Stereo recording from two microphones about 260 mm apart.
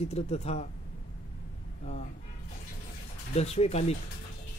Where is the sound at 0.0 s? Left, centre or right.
Left.